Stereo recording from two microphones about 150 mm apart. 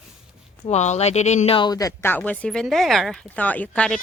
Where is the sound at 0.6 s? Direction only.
45° left (ahead or behind).